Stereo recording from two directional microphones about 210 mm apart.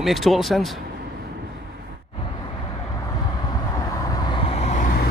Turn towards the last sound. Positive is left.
turn(degrees=40)  # may be behind; listen again after turning